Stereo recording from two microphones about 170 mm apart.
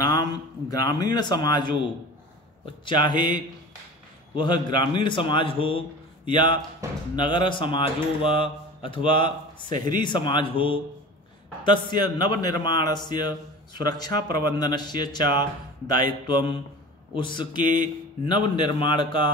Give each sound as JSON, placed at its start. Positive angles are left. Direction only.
{"t": 0.0, "sound": "speech", "side_deg": 20}